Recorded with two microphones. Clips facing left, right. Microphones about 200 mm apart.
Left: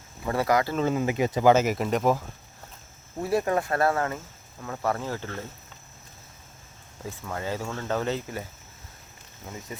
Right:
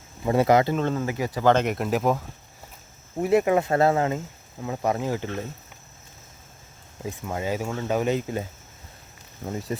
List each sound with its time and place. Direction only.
0.3 s speech: 20° right (ahead or behind)
0.8 s speech: 5° left (ahead or behind)
1.0 s speech: 20° left (ahead or behind)
1.5 s speech: 5° left (ahead or behind)
3.2 s speech: 20° right (ahead or behind)
7.0 s speech: 15° right (ahead or behind)
9.5 s speech: 35° right (ahead or behind)